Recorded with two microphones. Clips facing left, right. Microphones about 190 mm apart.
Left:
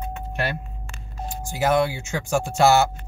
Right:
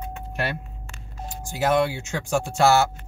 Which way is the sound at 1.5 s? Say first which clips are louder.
Left 1 dB; 5° left (ahead or behind).